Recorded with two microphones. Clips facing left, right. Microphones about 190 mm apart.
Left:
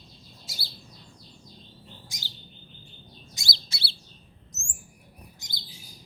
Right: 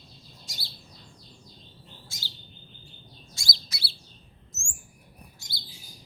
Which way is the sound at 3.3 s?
25° left (ahead or behind).